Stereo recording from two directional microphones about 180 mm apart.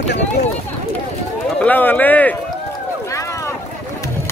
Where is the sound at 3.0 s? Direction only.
15° left (ahead or behind).